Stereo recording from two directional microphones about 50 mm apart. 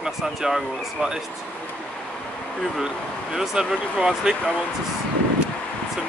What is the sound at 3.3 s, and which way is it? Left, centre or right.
Speech, centre.